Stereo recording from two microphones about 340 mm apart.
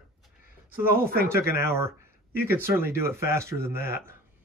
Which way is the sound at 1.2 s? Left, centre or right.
Centre.